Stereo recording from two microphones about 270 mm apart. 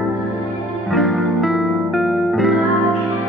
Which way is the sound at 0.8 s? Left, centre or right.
Centre.